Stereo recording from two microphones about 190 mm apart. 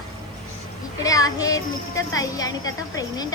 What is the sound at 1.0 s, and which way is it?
A woman's voice, 20° left (ahead or behind).